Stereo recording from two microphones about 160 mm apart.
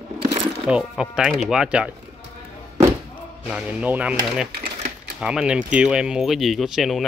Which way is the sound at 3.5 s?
10° right (ahead or behind).